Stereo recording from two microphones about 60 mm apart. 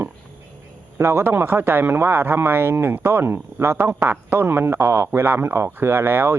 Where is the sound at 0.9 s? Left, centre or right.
Right.